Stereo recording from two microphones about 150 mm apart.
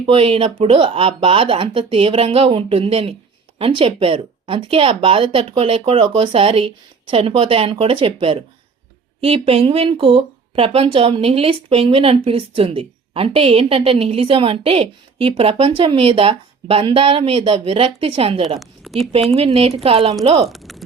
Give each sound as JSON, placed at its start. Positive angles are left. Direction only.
{"t": 0.0, "sound": "speech", "side_deg": -40}
{"t": 18.6, "sound": "a sound", "side_deg": 0}
{"t": 19.5, "sound": "speech", "side_deg": -40}
{"t": 20.5, "sound": "speech", "side_deg": 0}